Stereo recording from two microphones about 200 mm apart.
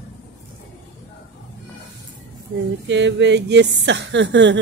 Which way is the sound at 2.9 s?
65° right (ahead or behind).